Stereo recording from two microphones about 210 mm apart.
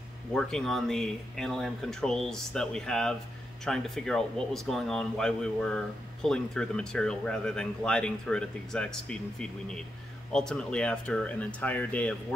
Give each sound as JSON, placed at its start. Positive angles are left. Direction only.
{"t": 0.3, "sound": "speech", "side_deg": 5}